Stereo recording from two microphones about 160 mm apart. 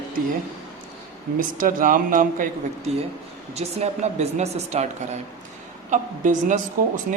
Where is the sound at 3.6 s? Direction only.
45° right (ahead or behind).